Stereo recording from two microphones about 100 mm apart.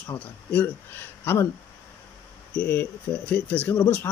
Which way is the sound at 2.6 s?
20° left (ahead or behind).